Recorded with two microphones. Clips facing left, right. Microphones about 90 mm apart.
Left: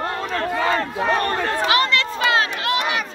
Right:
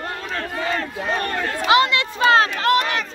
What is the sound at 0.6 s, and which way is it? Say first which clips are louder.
Speech: left 3 dB; 50° left (ahead or behind).